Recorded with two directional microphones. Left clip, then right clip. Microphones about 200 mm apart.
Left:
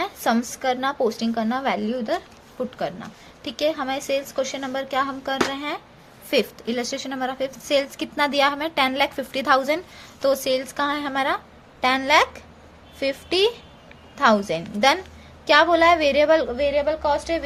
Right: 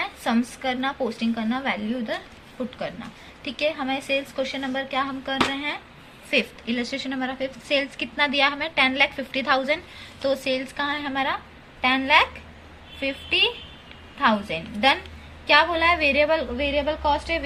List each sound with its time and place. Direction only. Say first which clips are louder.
0.0 s a woman's voice: left 3 dB; 60° left (ahead or behind)